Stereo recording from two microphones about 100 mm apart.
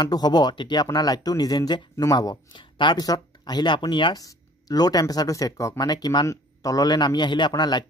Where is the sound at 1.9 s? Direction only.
35° left (ahead or behind).